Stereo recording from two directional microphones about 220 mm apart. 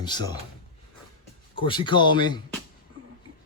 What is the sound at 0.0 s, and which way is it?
Speech, 20° left (ahead or behind).